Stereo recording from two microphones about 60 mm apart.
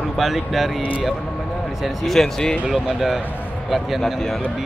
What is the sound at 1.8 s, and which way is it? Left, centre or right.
Speech, centre.